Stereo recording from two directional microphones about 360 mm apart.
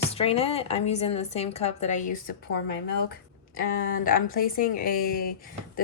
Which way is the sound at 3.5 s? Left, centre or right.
Left.